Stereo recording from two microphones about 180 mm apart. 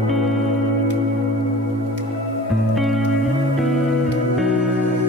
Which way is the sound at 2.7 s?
Centre (ahead or behind).